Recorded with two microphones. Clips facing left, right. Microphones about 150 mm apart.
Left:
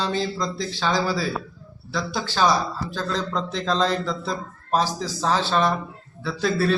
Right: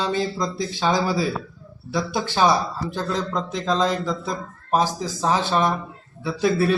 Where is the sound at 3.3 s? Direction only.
10° right (ahead or behind).